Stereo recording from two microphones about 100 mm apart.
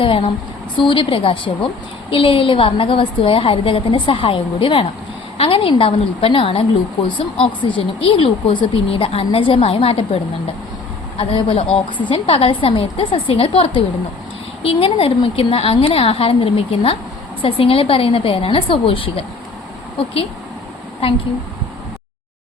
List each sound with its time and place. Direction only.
0.0 s a woman's voice: 60° left (ahead or behind)
7.1 s a woman's voice: 55° left (ahead or behind); by 10.0 s 75° left (ahead or behind)
11.2 s a woman's voice: 70° left (ahead or behind)
12.0 s a woman's voice: 60° left (ahead or behind)